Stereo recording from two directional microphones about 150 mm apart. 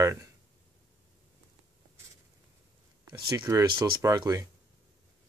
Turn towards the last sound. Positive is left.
turn(degrees=-25)  # may be behind; listen again after turning